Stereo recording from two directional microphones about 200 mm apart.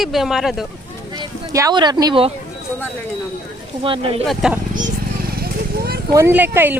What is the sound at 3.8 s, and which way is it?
Speech, 25° right (ahead or behind).